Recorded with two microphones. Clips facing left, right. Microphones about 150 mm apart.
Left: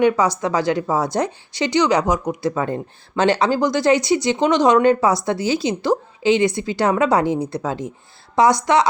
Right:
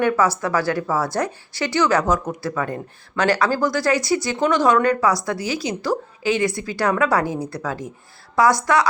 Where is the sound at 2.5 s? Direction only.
25° left (ahead or behind).